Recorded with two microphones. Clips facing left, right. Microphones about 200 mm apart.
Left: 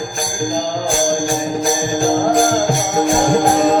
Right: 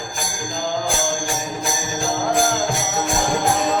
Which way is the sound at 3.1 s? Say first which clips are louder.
Left 6 dB; 50° left (ahead or behind).